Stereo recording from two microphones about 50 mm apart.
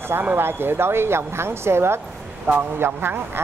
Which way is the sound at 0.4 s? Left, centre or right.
Right.